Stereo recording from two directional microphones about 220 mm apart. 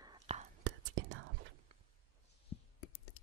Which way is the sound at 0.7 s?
60° right (ahead or behind).